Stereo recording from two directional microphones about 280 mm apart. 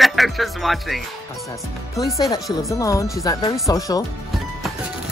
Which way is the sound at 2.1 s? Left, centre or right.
Centre.